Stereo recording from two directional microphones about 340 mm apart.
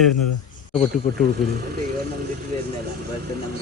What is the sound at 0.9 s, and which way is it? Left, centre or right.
Speech, centre.